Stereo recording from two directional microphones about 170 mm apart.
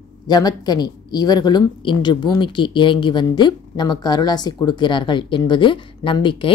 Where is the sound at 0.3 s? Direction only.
25° left (ahead or behind).